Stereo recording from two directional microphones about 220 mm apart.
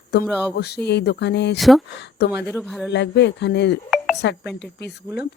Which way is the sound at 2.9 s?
50° left (ahead or behind).